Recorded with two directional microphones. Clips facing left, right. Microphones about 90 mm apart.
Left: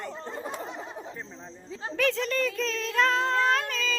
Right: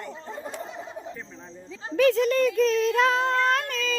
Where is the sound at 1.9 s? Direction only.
5° right (ahead or behind).